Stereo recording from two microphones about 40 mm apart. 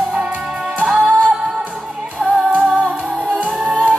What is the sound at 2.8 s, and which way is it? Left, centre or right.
Music, right.